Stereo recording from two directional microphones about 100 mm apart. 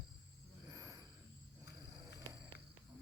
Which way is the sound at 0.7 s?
35° right (ahead or behind).